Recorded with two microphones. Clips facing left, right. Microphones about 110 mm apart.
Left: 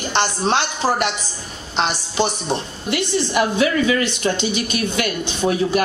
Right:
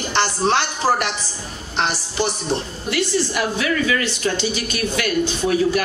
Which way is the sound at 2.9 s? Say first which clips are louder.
Left 1 dB; 20° left (ahead or behind).